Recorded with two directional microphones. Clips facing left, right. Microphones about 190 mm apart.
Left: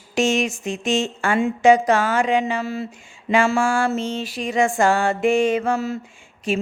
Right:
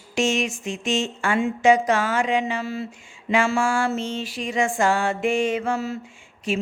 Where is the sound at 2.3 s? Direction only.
45° left (ahead or behind).